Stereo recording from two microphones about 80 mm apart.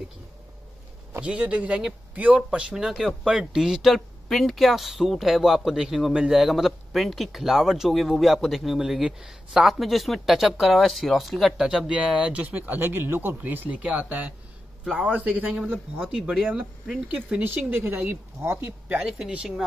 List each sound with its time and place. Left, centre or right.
1.2 s speech: centre
2.7 s speech: centre; by 18.8 s right
18.9 s speech: centre